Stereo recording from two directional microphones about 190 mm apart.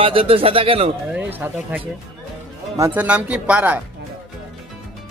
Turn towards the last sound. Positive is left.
turn(degrees=-5)  # may be behind; listen again after turning